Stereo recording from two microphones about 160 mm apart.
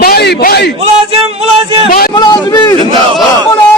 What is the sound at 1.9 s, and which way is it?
Speech, 65° left (ahead or behind).